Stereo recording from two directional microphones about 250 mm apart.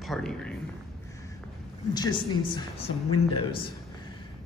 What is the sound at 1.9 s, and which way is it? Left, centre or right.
A man's voice, centre.